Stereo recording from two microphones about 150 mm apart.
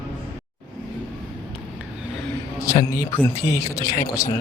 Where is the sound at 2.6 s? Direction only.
20° left (ahead or behind).